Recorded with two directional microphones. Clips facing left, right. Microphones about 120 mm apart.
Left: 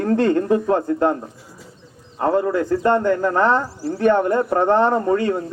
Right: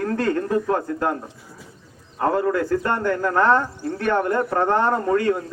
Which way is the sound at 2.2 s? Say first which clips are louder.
Left 2 dB; 20° left (ahead or behind).